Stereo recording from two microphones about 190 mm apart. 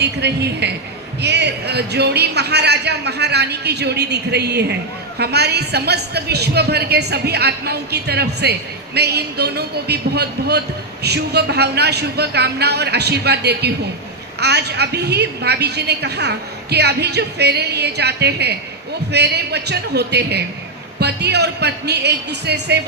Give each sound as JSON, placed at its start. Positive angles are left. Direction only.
{"t": 0.0, "sound": "a man's voice", "side_deg": -60}